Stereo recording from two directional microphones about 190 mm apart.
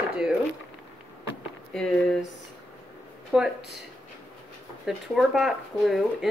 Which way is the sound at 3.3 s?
5° right (ahead or behind).